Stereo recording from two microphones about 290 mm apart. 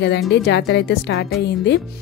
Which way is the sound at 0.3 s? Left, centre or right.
Left.